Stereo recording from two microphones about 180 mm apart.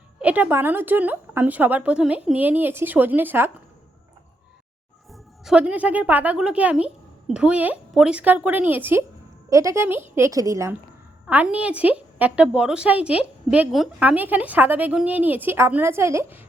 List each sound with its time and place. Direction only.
0.2 s a woman's voice: 10° right (ahead or behind)
5.1 s a woman's voice: 5° right (ahead or behind)